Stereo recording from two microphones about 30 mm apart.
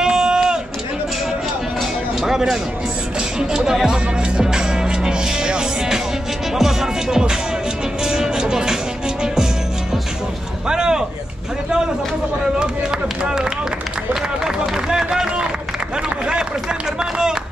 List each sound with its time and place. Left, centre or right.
0.0 s run: right
2.2 s speech: centre
3.8 s music: right
6.5 s music: centre
10.7 s a sound: right
13.2 s run: right
14.4 s run: centre
17.0 s run: right